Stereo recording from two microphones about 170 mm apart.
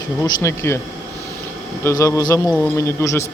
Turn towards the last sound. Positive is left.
turn(degrees=15)  # may be behind; listen again after turning